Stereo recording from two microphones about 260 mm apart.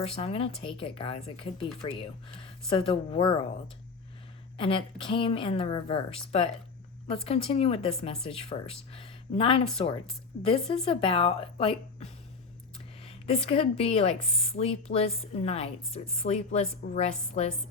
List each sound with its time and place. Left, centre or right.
0.2 s a woman's voice: left
4.5 s a woman's voice: centre
7.3 s a woman's voice: left